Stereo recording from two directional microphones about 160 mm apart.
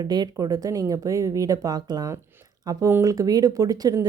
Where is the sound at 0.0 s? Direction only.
25° right (ahead or behind).